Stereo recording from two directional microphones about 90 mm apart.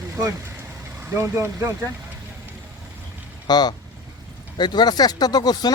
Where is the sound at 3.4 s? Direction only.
50° left (ahead or behind).